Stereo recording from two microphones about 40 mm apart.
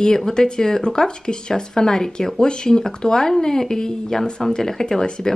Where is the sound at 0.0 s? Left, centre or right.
Centre.